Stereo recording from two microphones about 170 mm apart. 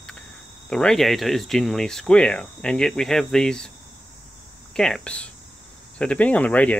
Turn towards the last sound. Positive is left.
turn(degrees=5)  # may be behind; listen again after turning